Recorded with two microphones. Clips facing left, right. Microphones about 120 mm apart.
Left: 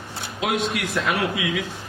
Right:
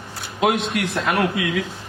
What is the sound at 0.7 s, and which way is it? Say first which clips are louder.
Speech: right 2 dB; 50° right (ahead or behind).